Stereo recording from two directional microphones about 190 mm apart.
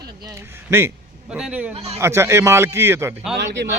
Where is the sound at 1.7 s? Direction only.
35° right (ahead or behind).